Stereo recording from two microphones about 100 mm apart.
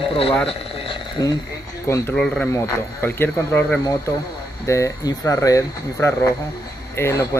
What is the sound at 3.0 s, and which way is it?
Speech, 20° left (ahead or behind).